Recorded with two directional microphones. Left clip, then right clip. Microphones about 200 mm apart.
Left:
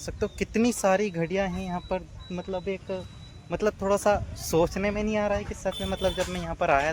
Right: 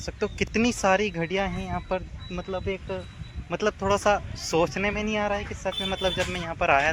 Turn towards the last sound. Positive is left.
turn(degrees=-5)  # may be behind; listen again after turning